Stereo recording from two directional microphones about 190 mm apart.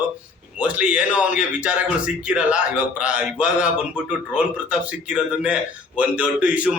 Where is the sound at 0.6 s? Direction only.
5° right (ahead or behind).